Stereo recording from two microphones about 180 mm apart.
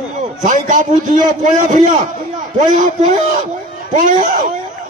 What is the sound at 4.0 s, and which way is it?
Speech, 50° right (ahead or behind).